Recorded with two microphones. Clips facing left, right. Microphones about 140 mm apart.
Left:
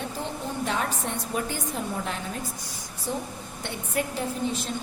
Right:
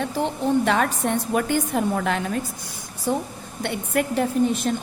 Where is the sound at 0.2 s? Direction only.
75° right (ahead or behind).